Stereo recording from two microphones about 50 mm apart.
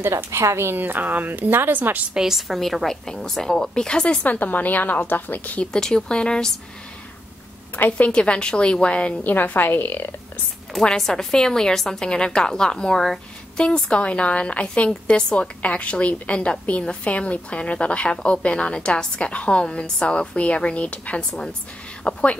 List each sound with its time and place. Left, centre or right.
0.0 s a woman's voice: right
0.7 s a woman's voice: right
2.1 s a woman's voice: centre
4.2 s a woman's voice: left
5.7 s a woman's voice: centre
7.7 s a woman's voice: left
8.1 s a woman's voice: centre
9.2 s a woman's voice: left
10.7 s a woman's voice: centre
13.8 s a woman's voice: left